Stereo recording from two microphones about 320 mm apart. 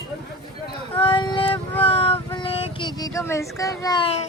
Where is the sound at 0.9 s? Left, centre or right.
Centre.